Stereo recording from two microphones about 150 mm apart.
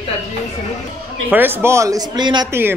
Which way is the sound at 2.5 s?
15° right (ahead or behind).